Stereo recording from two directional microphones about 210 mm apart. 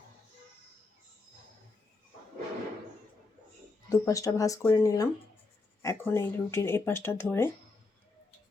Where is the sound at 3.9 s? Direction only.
15° left (ahead or behind).